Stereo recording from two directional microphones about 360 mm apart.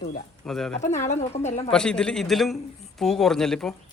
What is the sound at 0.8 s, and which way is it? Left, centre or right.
Speech, centre.